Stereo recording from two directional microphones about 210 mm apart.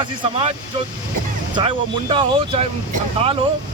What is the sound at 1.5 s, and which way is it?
Speech, 25° right (ahead or behind).